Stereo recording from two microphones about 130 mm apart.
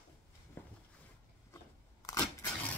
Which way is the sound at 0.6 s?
15° left (ahead or behind).